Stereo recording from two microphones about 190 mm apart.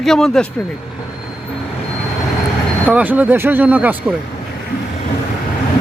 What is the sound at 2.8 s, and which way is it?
Speech, 10° right (ahead or behind).